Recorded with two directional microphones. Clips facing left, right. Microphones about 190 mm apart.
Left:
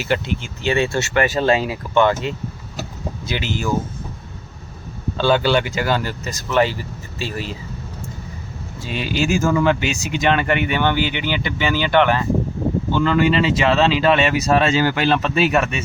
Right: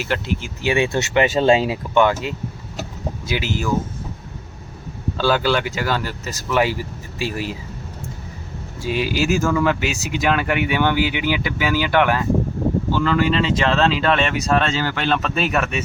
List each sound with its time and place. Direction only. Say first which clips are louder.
0.0 s speech: left 2 dB; centre (ahead or behind); by 1.8 s 25° right (ahead or behind)
2.0 s speech: left 1 dB; 10° right (ahead or behind)
5.1 s speech: left 2 dB; 5° right (ahead or behind)
8.8 s speech: right 1 dB; 5° right (ahead or behind)